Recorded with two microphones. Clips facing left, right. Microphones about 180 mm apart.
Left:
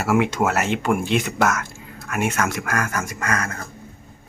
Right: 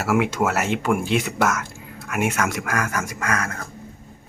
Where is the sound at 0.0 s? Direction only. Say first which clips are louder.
Left 1 dB; 5° right (ahead or behind).